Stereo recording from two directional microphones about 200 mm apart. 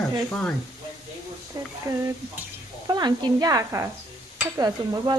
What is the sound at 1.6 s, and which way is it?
Speech, 20° right (ahead or behind).